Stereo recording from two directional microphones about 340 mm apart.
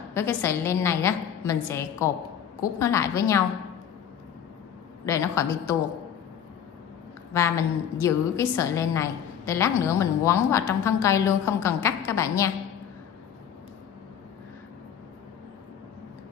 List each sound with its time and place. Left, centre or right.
0.1 s a woman's voice: centre
5.0 s a woman's voice: centre
7.3 s a woman's voice: centre